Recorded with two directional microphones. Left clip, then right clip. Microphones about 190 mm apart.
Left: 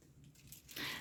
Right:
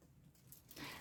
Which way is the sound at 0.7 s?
Centre (ahead or behind).